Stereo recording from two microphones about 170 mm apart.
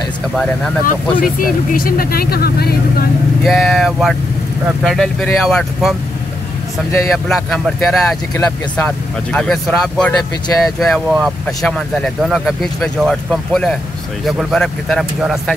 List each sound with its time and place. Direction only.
0.8 s speech: 55° left (ahead or behind)
3.4 s speech: centre (ahead or behind)
7.2 s speech: 5° left (ahead or behind)